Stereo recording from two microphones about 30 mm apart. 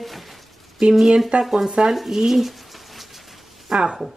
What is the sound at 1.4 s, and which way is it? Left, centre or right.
Speech, centre.